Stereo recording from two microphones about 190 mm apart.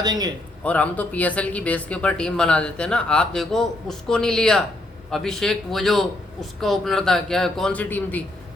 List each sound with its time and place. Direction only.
0.0 s a man's voice: 20° right (ahead or behind)
0.6 s speech: 10° left (ahead or behind)